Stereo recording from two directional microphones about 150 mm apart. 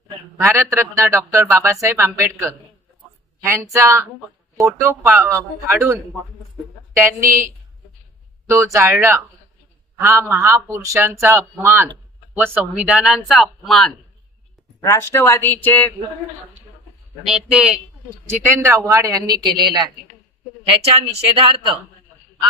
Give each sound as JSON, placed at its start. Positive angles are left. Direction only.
{"t": 0.4, "sound": "a man's voice", "side_deg": -20}
{"t": 7.2, "sound": "a man's voice", "side_deg": -20}
{"t": 8.7, "sound": "a man's voice", "side_deg": -15}
{"t": 14.8, "sound": "speech", "side_deg": 20}
{"t": 15.6, "sound": "a sound", "side_deg": 10}
{"t": 17.2, "sound": "speech", "side_deg": -5}
{"t": 18.2, "sound": "speech", "side_deg": -20}
{"t": 20.6, "sound": "speech", "side_deg": -40}